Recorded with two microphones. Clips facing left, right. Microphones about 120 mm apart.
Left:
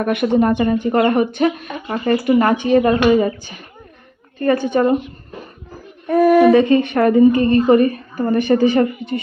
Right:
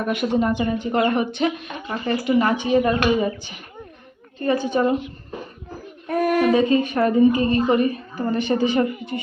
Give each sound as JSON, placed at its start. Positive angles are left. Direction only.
{"t": 0.0, "sound": "a woman's voice", "side_deg": 60}
{"t": 6.5, "sound": "a woman's voice", "side_deg": 60}